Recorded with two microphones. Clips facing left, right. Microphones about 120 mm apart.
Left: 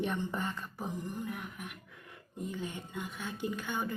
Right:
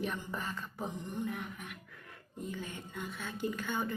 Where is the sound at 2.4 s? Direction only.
15° left (ahead or behind).